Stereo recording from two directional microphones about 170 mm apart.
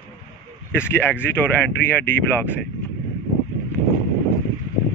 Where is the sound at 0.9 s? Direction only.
10° left (ahead or behind).